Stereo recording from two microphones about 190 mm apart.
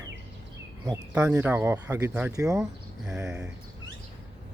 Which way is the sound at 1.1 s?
10° right (ahead or behind).